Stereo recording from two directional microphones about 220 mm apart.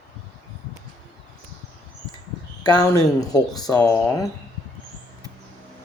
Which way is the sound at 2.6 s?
15° left (ahead or behind).